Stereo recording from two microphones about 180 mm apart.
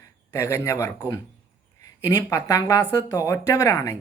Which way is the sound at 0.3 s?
15° left (ahead or behind).